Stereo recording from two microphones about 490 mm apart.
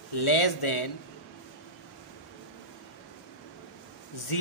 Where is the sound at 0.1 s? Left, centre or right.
Left.